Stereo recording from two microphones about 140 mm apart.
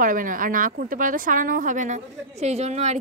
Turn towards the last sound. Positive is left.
turn(degrees=-55)  # may be behind; listen again after turning